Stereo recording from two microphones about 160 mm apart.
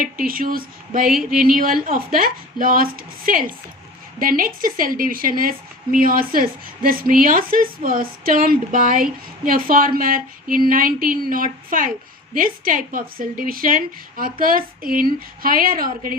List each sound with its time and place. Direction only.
0.0 s a woman's voice: 60° right (ahead or behind)